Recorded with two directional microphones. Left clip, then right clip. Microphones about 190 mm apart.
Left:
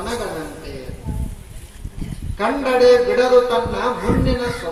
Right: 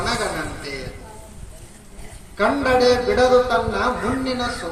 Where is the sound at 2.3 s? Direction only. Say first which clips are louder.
Even; 30° left (ahead or behind).